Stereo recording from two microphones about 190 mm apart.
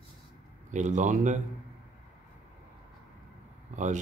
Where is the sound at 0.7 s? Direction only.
40° right (ahead or behind).